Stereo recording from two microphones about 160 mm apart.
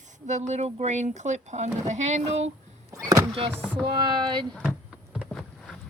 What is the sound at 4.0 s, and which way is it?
Speech, 25° right (ahead or behind).